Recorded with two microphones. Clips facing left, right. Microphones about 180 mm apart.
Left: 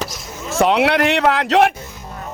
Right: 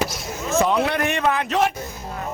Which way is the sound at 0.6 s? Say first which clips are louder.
Left 5 dB; 75° left (ahead or behind).